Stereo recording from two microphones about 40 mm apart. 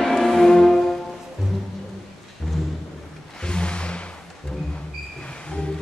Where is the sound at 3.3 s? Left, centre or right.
Left.